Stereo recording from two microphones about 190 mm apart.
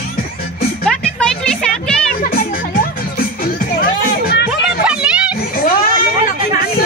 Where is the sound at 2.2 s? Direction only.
50° left (ahead or behind).